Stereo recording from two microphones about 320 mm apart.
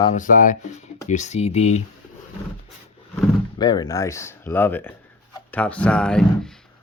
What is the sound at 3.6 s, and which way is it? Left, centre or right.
Speech, centre.